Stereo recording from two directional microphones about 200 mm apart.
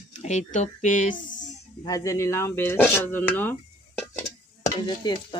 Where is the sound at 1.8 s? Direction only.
15° left (ahead or behind).